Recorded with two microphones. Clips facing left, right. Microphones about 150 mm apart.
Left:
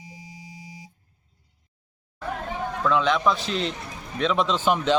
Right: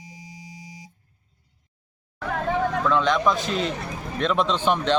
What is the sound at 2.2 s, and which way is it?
Hubbub, 90° right.